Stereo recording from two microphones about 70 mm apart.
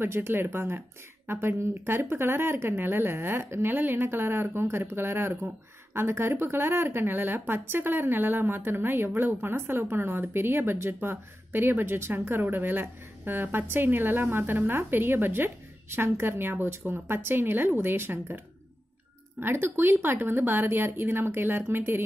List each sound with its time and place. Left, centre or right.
0.0 s a woman's voice: right
19.4 s a woman's voice: right